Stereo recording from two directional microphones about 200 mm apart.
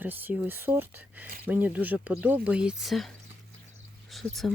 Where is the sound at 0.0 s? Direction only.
10° right (ahead or behind).